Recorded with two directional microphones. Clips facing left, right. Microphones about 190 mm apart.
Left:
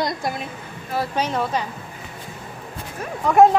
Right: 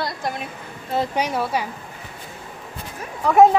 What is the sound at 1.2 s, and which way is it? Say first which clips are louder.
Speech: even; 10° right (ahead or behind).